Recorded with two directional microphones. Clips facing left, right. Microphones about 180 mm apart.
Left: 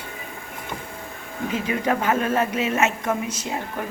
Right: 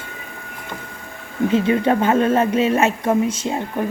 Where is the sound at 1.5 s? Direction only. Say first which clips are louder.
Right 6 dB; 30° right (ahead or behind).